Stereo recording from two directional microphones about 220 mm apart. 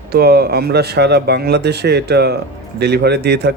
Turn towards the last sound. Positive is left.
turn(degrees=-50)  # may be behind; listen again after turning